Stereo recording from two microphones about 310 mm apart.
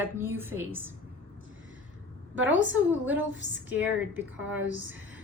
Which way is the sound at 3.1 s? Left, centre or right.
Right.